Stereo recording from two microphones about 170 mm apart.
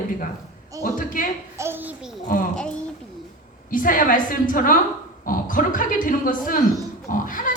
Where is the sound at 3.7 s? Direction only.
55° left (ahead or behind).